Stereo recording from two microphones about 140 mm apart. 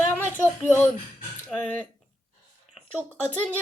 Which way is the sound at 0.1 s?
15° left (ahead or behind).